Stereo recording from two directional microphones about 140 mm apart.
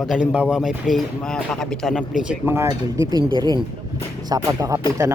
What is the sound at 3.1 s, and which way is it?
Speech, 35° right (ahead or behind).